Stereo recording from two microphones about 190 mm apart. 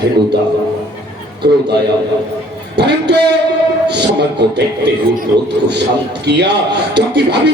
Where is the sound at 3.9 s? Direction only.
60° right (ahead or behind).